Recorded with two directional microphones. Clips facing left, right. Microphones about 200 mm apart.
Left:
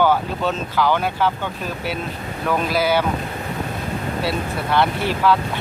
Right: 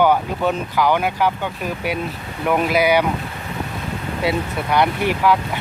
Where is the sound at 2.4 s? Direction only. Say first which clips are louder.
Right 3 dB; 15° right (ahead or behind).